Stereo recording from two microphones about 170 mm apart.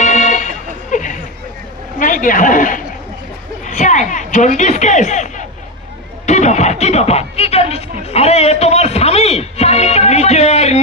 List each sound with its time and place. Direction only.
0.0 s music: 45° left (ahead or behind)
2.0 s speech: 50° left (ahead or behind)
3.6 s a sound: 45° left (ahead or behind)
8.0 s speech: 40° left (ahead or behind)